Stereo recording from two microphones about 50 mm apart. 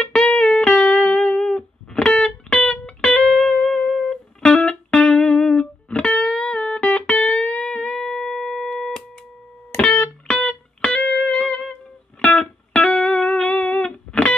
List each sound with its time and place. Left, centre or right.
0.0 s music: centre